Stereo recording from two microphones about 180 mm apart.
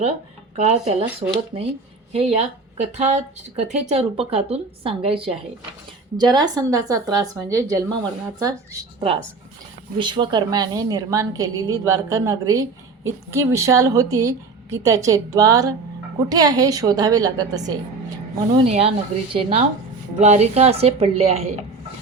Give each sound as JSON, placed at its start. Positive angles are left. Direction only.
{"t": 0.5, "sound": "a woman's voice", "side_deg": -35}
{"t": 18.5, "sound": "speech", "side_deg": -35}